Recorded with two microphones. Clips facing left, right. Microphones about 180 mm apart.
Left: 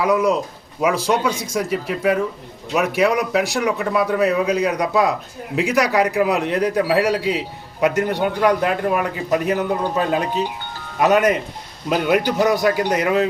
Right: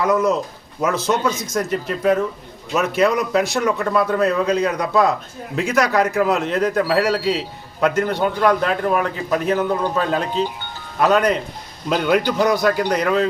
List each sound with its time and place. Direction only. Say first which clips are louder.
0.0 s a man's voice: even; 10° left (ahead or behind)
11.9 s a man's voice: even; 5° left (ahead or behind)